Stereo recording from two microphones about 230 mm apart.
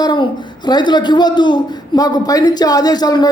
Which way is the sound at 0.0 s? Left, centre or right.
Centre.